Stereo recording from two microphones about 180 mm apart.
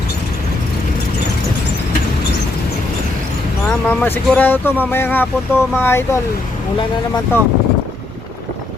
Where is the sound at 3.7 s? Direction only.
10° left (ahead or behind).